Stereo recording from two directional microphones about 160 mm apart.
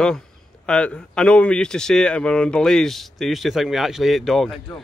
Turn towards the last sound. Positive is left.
turn(degrees=0)  # may be behind; listen again after turning